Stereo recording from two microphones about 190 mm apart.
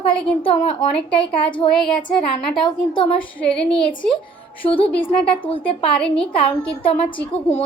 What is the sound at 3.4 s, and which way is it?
Child singing, 30° left (ahead or behind).